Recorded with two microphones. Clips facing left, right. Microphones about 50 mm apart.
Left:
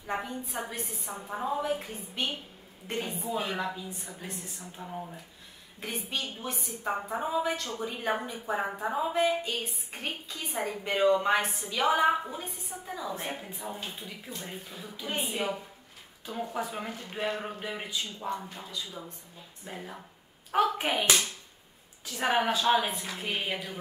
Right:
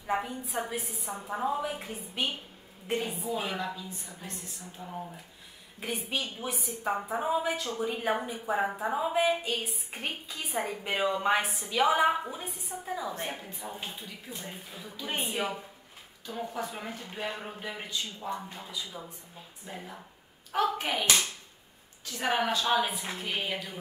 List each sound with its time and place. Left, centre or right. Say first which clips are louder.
0.0 s a woman's voice: right 2 dB; centre
3.5 s a man's voice: left 1 dB; centre
4.8 s a woman's voice: even; centre
16.3 s a man's voice: left 1 dB; centre
18.3 s a woman's voice: left 1 dB; centre
19.7 s a man's voice: left 1 dB; centre
22.2 s a man's voice: left 2 dB; centre
23.1 s a man's voice: left 1 dB; centre